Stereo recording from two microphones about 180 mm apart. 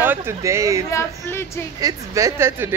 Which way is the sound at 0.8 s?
15° left (ahead or behind).